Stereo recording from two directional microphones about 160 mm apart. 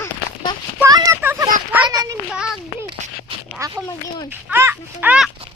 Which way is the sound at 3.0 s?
50° right (ahead or behind).